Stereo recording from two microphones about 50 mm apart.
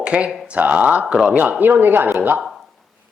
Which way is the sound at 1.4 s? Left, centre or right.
Right.